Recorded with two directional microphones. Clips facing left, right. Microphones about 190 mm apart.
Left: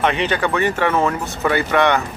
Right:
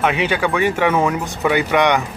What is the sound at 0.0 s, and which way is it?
Speech, 10° right (ahead or behind).